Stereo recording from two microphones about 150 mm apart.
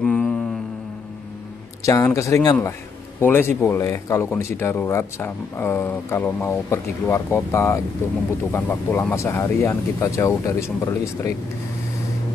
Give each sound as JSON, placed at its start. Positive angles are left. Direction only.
{"t": 0.0, "sound": "mantra", "side_deg": 5}
{"t": 1.8, "sound": "speech", "side_deg": 20}